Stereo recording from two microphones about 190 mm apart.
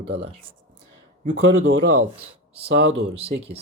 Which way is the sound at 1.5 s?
90° right.